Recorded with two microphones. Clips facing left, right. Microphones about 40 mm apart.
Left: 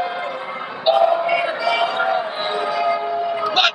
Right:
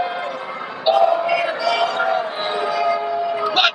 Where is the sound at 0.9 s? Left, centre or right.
Centre.